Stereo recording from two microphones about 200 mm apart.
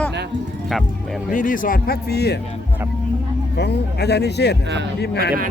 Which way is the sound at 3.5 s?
55° left (ahead or behind).